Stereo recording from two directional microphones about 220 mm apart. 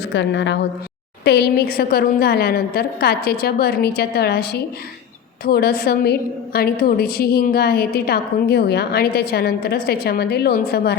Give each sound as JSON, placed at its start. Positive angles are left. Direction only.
{"t": 0.1, "sound": "a woman's voice", "side_deg": 55}